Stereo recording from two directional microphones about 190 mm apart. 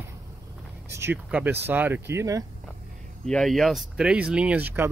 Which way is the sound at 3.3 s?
Centre (ahead or behind).